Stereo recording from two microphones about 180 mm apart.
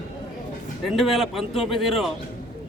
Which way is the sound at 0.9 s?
Centre (ahead or behind).